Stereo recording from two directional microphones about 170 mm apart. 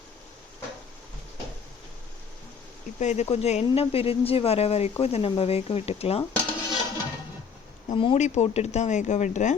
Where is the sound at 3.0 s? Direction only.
45° left (ahead or behind).